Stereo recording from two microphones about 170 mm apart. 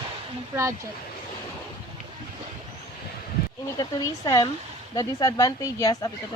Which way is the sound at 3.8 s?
20° left (ahead or behind).